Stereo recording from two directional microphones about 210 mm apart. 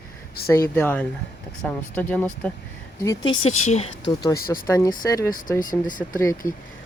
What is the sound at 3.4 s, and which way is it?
Speech, 30° left (ahead or behind).